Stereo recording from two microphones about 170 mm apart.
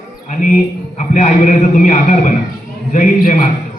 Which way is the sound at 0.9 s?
45° left (ahead or behind).